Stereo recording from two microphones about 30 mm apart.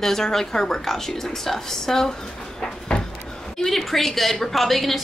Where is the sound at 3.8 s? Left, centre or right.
Centre.